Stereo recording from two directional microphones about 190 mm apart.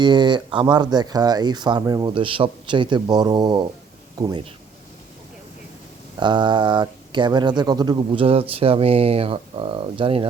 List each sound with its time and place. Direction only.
0.0 s speech: 25° right (ahead or behind)
6.1 s speech: 25° right (ahead or behind)